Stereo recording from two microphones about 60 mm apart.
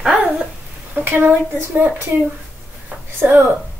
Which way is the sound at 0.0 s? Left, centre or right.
Centre.